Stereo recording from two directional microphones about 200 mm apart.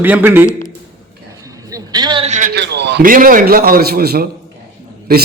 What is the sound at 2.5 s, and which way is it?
A man's voice, 55° right (ahead or behind).